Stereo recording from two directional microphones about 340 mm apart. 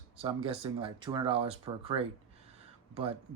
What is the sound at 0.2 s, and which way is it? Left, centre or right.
Speech, centre.